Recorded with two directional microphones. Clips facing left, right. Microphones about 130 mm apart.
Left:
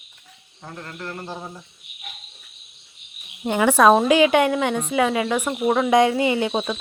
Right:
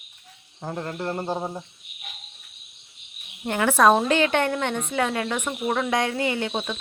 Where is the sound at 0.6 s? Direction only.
35° right (ahead or behind).